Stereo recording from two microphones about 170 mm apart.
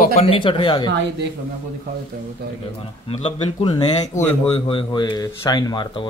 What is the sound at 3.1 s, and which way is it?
Speech, 30° left (ahead or behind).